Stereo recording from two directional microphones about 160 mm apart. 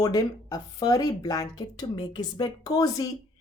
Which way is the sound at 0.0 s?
25° left (ahead or behind).